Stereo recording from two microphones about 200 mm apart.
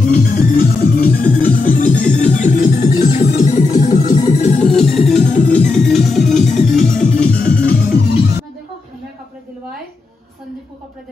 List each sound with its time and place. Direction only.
0.0 s music: 45° left (ahead or behind)
4.9 s music: centre (ahead or behind)
5.3 s music: 40° left (ahead or behind)
5.7 s music: centre (ahead or behind)
7.3 s music: 45° left (ahead or behind)